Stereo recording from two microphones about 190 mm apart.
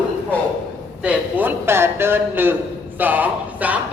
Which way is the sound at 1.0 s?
10° right (ahead or behind).